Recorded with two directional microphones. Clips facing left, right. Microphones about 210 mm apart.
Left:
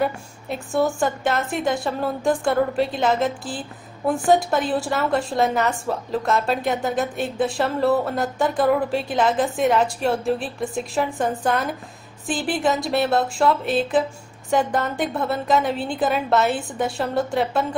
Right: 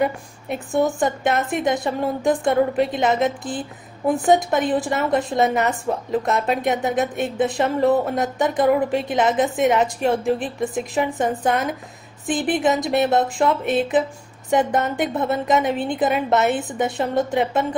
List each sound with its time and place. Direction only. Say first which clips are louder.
0.0 s a woman's voice: right 2 dB; 20° right (ahead or behind)